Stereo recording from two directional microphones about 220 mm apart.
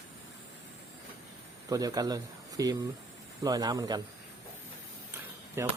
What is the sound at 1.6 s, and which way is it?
Speech, 15° right (ahead or behind).